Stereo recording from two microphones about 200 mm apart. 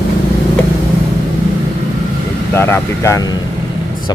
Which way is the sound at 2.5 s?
10° left (ahead or behind).